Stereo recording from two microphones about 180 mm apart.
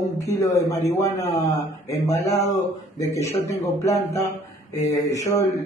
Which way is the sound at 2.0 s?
20° left (ahead or behind).